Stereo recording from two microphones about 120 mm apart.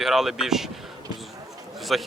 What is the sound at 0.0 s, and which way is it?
Speech, centre (ahead or behind).